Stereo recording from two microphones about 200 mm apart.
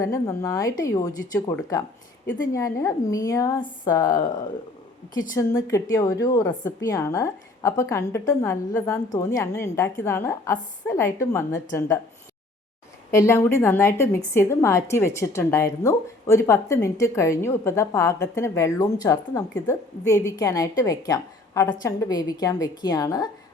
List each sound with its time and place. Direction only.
0.0 s a woman's voice: 15° left (ahead or behind)
5.3 s a woman's voice: 15° left (ahead or behind)
13.1 s a woman's voice: 15° left (ahead or behind)